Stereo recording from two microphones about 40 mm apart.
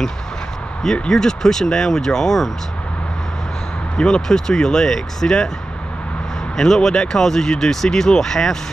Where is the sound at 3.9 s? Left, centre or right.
Left.